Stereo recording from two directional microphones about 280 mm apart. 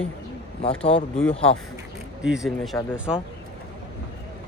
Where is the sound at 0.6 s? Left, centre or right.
Centre.